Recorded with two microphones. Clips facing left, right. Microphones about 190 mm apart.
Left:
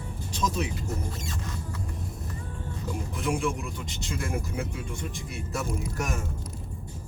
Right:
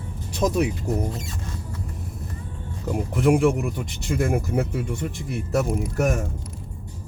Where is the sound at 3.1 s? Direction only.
60° right (ahead or behind).